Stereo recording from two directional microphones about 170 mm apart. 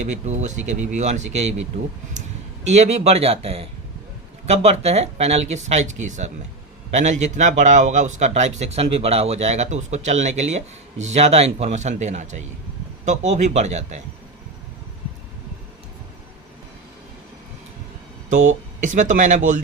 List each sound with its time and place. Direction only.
0.0 s a man's voice: 40° right (ahead or behind)
2.6 s a man's voice: 40° right (ahead or behind)
18.3 s a man's voice: 50° right (ahead or behind)